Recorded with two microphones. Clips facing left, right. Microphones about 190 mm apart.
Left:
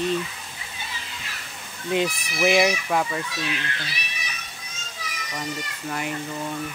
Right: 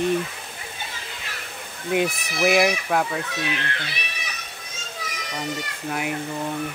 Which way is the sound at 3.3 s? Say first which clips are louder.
Right 2 dB; 60° right (ahead or behind).